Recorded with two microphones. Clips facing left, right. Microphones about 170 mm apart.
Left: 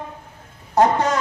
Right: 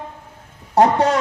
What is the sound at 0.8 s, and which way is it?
Speech, 35° right (ahead or behind).